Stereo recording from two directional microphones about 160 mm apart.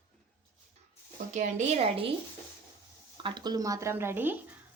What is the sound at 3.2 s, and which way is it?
Speech, 25° right (ahead or behind).